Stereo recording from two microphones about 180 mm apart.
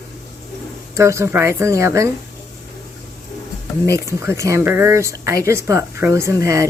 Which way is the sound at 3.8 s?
15° right (ahead or behind).